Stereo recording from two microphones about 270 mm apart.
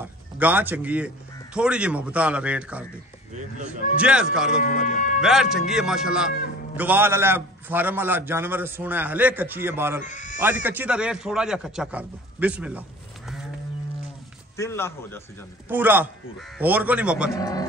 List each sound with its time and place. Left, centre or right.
0.0 s a man's voice: centre
3.3 s speech: right
4.0 s a man's voice: centre
4.6 s music: left
5.2 s a man's voice: centre
10.0 s speech: left
10.4 s a man's voice: centre
14.6 s a man's voice: centre
15.7 s a man's voice: centre
17.4 s a man's voice: centre